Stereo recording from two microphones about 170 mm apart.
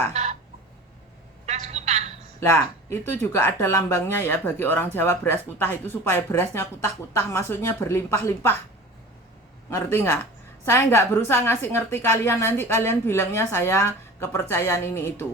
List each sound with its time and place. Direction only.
0.1 s a sound: 40° right (ahead or behind)
1.5 s telephone: 40° right (ahead or behind)
2.4 s speech: 15° left (ahead or behind)
9.6 s speech: 15° left (ahead or behind)